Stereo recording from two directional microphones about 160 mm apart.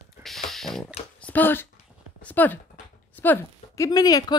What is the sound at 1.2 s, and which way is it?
Speech, 10° left (ahead or behind).